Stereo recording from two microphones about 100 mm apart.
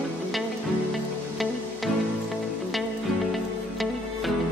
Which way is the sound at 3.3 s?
Centre (ahead or behind).